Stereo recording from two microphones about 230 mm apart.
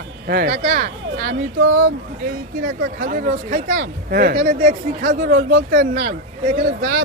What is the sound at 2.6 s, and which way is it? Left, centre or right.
Speech, right.